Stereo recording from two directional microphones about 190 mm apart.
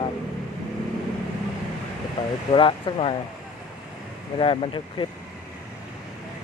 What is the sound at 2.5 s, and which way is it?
Speech, 25° left (ahead or behind).